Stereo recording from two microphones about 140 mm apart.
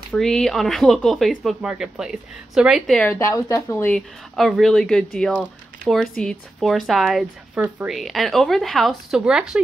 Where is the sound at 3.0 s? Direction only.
20° left (ahead or behind).